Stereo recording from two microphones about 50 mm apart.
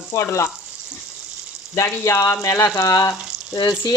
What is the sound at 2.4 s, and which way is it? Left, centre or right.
Speech, left.